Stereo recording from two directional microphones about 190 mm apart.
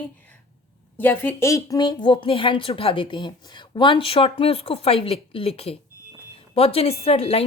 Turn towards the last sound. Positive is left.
turn(degrees=30)  # may be behind; listen again after turning